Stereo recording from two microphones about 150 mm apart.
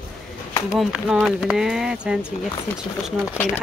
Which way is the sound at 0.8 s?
Centre (ahead or behind).